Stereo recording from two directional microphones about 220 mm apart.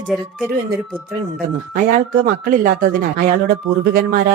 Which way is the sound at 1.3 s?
40° right (ahead or behind).